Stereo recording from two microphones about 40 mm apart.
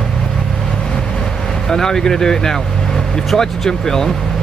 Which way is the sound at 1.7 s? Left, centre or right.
Centre.